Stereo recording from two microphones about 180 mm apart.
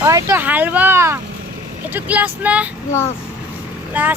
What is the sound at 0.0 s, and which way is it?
Speech, 15° right (ahead or behind).